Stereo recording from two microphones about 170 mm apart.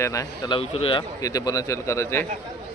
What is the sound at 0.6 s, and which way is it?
A man's voice, 35° left (ahead or behind).